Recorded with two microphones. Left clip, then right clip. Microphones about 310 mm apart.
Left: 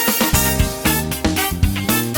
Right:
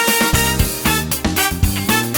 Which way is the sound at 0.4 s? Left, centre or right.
Centre.